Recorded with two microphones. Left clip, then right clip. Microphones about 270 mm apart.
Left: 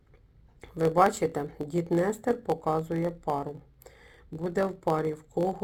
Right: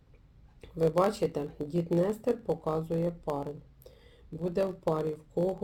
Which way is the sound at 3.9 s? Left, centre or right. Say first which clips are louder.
Left 3 dB; left.